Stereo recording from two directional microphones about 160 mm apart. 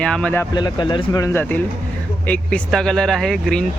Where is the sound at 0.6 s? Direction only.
25° left (ahead or behind).